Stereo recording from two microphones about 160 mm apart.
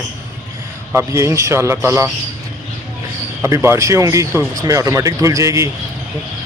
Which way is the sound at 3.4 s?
15° right (ahead or behind).